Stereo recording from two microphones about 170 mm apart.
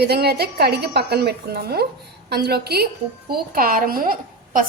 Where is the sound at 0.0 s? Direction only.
70° right (ahead or behind).